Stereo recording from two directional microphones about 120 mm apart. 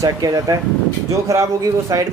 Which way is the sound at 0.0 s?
30° right (ahead or behind).